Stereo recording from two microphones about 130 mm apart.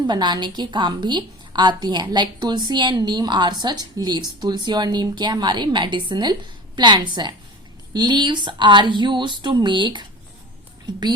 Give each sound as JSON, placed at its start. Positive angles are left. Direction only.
{"t": 0.1, "sound": "a woman's voice", "side_deg": -35}